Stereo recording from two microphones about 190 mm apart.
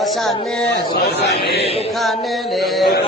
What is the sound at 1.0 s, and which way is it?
Speech, 60° left (ahead or behind).